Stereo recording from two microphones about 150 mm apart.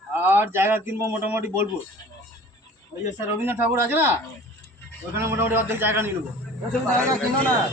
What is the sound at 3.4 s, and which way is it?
Speech, 15° right (ahead or behind).